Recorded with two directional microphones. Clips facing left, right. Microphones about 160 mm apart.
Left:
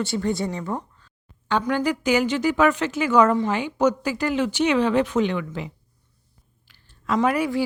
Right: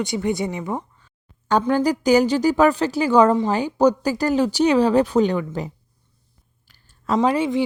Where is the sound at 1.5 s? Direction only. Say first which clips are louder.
Right 4 dB; 40° right (ahead or behind).